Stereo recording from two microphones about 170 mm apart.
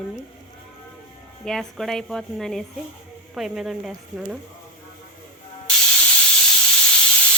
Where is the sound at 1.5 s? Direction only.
5° left (ahead or behind).